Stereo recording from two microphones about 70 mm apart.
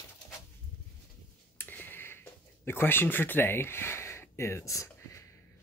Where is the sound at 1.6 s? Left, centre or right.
Left.